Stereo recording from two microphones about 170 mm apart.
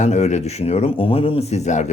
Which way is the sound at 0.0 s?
45° left (ahead or behind).